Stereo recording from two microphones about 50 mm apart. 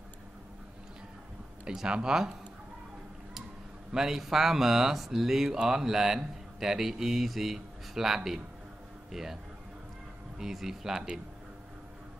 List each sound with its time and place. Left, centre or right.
1.6 s speech: centre
3.9 s speech: centre